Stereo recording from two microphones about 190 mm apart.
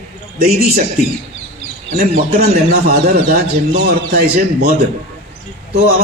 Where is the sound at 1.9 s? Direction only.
55° right (ahead or behind).